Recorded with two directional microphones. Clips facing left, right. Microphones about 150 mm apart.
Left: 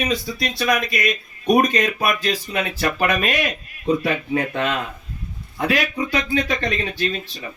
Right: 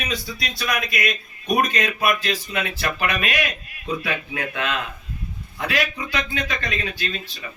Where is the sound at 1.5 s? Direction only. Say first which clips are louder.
Left 3 dB; 45° left (ahead or behind).